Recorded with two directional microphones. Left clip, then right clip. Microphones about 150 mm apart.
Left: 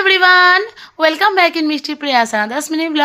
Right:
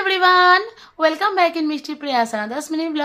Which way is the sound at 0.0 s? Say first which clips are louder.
Left 5 dB; 25° left (ahead or behind).